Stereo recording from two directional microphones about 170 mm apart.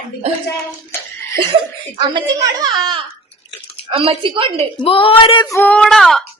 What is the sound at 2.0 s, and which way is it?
A child's voice, 25° right (ahead or behind).